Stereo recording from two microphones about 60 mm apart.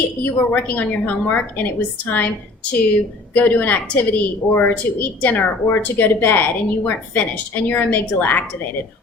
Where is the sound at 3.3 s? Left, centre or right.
Left.